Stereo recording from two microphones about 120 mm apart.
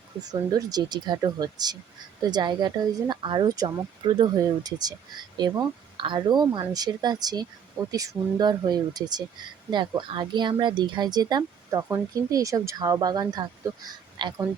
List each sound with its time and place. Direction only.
0.2 s speech: 35° right (ahead or behind)
11.8 s speech: 25° right (ahead or behind); by 14.3 s 40° right (ahead or behind)